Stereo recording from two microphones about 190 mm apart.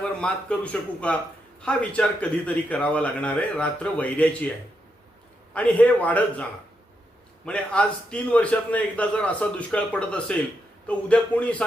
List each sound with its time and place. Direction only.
0.0 s a man's voice: 5° left (ahead or behind)
5.5 s a man's voice: 5° left (ahead or behind)